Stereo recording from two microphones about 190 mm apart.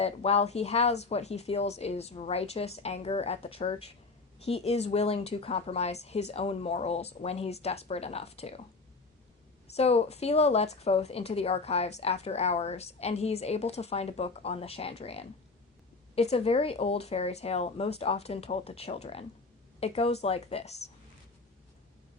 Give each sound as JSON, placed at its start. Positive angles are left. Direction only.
{"t": 0.0, "sound": "a woman's voice", "side_deg": 35}
{"t": 9.7, "sound": "a woman's voice", "side_deg": 35}